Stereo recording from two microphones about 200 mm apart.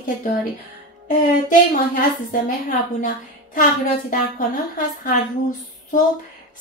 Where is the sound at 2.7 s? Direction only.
40° left (ahead or behind).